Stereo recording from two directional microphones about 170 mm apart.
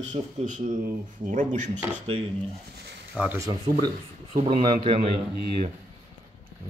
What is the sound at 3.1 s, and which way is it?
Speech, 10° right (ahead or behind).